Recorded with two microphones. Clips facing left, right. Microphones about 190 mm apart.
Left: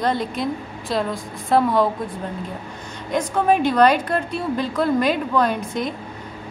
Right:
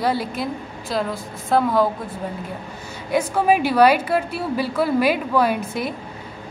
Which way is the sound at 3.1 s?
10° right (ahead or behind).